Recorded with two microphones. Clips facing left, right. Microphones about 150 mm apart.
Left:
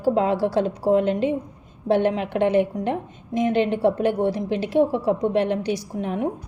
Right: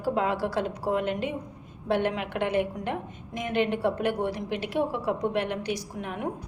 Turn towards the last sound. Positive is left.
turn(degrees=30)  # may be behind; listen again after turning